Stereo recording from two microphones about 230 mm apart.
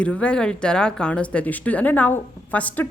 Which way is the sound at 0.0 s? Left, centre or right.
Centre.